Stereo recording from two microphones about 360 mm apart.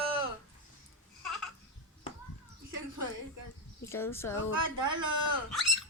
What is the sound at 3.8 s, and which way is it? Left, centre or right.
Speech, centre.